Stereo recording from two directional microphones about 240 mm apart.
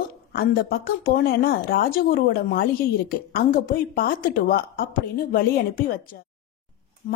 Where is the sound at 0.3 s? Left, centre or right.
Left.